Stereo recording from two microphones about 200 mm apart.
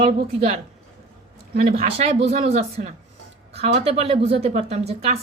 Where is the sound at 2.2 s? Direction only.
35° right (ahead or behind).